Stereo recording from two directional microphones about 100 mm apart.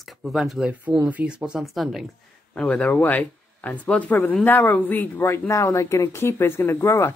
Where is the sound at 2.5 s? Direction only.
10° left (ahead or behind).